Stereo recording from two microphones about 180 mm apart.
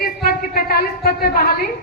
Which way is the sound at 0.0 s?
55° left (ahead or behind).